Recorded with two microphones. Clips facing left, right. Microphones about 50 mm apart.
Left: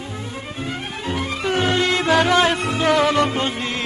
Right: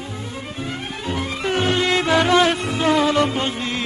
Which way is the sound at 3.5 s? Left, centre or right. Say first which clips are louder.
Even; left.